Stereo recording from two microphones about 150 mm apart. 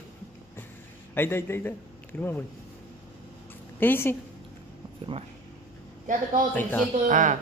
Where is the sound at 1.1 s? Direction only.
15° left (ahead or behind).